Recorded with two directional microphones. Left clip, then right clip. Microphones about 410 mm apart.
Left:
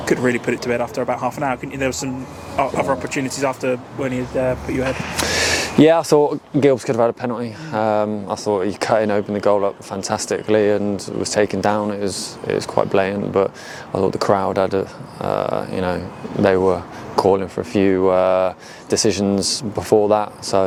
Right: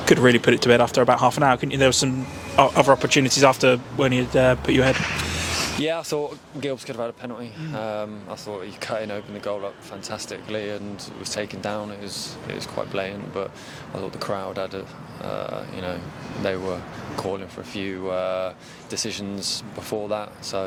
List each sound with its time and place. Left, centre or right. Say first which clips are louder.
0.0 s speech: right 2 dB; right
5.8 s speech: left 12 dB; left